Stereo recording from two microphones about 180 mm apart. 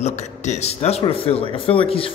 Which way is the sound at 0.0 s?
40° left (ahead or behind).